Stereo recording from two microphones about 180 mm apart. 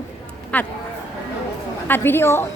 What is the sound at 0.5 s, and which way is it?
Speech, 5° left (ahead or behind).